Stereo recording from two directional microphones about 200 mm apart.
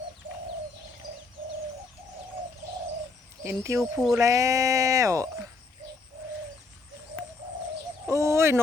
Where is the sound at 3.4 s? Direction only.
10° right (ahead or behind).